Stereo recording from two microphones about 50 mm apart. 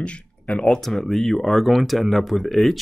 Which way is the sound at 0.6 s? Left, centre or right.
Centre.